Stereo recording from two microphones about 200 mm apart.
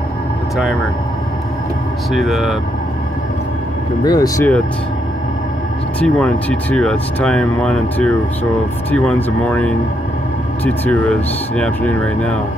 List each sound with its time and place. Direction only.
2.1 s speech: centre (ahead or behind)
4.0 s speech: 20° left (ahead or behind)
5.9 s speech: 5° left (ahead or behind)